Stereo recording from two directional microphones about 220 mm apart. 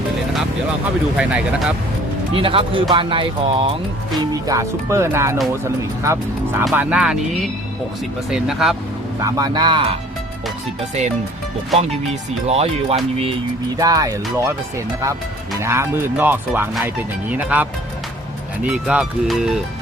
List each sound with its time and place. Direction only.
1.1 s speech: 5° right (ahead or behind)
2.3 s speech: 25° right (ahead or behind); by 7.2 s 5° right (ahead or behind)
8.3 s speech: centre (ahead or behind)
9.2 s speech: 15° right (ahead or behind)
12.5 s speech: 30° right (ahead or behind)
13.7 s speech: 15° right (ahead or behind)
15.6 s speech: 10° right (ahead or behind)